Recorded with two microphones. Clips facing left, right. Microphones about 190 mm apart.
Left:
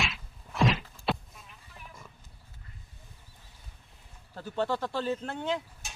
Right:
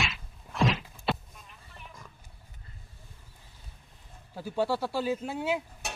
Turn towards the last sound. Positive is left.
turn(degrees=-65)  # may be behind; listen again after turning